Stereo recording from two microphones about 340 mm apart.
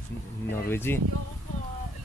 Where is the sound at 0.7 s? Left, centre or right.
Centre.